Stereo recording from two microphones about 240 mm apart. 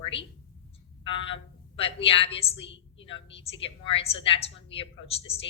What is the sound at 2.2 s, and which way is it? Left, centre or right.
A woman's voice, left.